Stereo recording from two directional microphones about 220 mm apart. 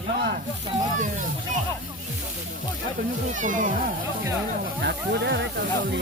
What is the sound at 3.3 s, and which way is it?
Speech, 35° right (ahead or behind).